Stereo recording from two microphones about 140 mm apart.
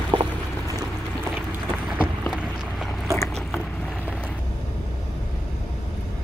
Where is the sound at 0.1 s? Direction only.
35° right (ahead or behind).